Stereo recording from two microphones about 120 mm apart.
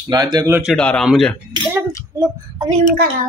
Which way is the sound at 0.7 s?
5° left (ahead or behind).